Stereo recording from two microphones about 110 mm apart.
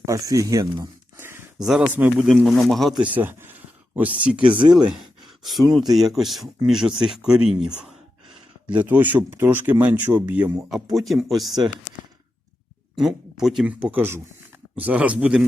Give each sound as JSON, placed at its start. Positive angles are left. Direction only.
{"t": 0.0, "sound": "speech", "side_deg": -30}
{"t": 1.1, "sound": "a sound", "side_deg": -20}
{"t": 1.5, "sound": "speech", "side_deg": -5}
{"t": 1.9, "sound": "speech", "side_deg": -15}
{"t": 2.2, "sound": "speech", "side_deg": 0}
{"t": 3.0, "sound": "speech", "side_deg": -15}
{"t": 10.9, "sound": "speech", "side_deg": 0}
{"t": 13.0, "sound": "speech", "side_deg": -5}